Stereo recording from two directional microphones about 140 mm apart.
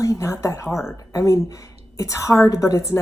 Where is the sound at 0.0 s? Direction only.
20° left (ahead or behind).